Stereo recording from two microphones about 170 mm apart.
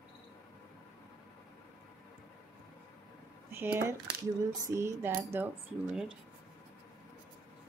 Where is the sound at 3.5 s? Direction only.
15° right (ahead or behind).